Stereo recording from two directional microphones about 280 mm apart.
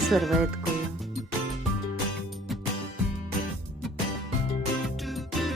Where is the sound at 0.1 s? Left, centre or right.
Centre.